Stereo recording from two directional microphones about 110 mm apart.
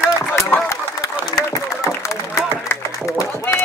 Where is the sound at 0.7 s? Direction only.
30° left (ahead or behind).